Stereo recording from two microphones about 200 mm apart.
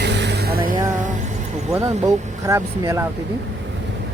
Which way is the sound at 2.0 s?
15° right (ahead or behind).